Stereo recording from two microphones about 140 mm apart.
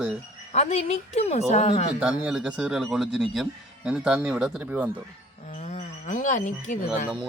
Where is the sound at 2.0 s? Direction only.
5° right (ahead or behind).